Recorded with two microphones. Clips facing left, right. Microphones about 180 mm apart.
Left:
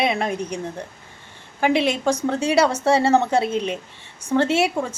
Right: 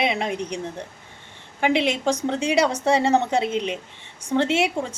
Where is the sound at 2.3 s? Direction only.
20° right (ahead or behind).